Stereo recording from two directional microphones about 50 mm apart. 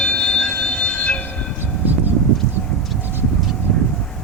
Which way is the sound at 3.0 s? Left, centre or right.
Right.